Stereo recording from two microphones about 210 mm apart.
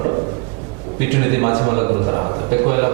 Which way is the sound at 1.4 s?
25° right (ahead or behind).